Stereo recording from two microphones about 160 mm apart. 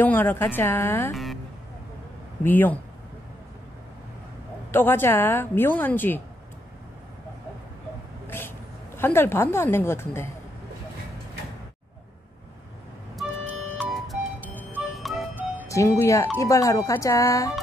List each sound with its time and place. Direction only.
0.0 s a woman's voice: 10° left (ahead or behind)
1.1 s a sound: centre (ahead or behind)
2.4 s a woman's voice: 10° left (ahead or behind)
4.6 s a woman's voice: 15° left (ahead or behind)
8.3 s a woman's voice: 15° left (ahead or behind)
13.1 s vehicle: centre (ahead or behind)
13.7 s music: centre (ahead or behind)
15.3 s music: 10° right (ahead or behind)
15.7 s a woman's voice: 15° left (ahead or behind)